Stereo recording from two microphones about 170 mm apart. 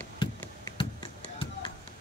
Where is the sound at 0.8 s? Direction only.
30° left (ahead or behind).